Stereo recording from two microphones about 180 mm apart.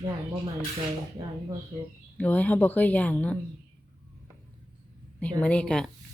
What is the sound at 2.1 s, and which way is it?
Speech, 10° left (ahead or behind).